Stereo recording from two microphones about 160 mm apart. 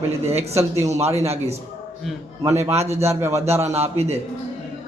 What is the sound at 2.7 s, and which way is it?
Speech, 40° right (ahead or behind).